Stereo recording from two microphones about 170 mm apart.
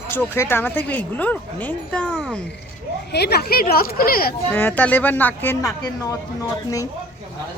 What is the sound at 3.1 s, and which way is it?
Speech, 75° left (ahead or behind).